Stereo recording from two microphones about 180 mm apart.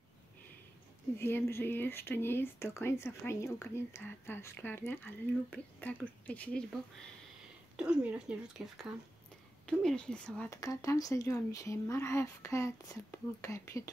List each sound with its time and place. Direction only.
1.1 s speech: 15° left (ahead or behind)
7.7 s speech: 5° right (ahead or behind)
10.5 s speech: 20° left (ahead or behind)